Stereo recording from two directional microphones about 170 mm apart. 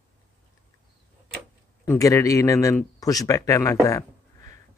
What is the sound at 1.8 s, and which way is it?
A man's voice, 20° left (ahead or behind).